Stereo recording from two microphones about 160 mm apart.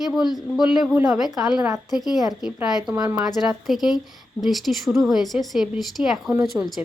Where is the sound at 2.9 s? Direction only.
15° right (ahead or behind).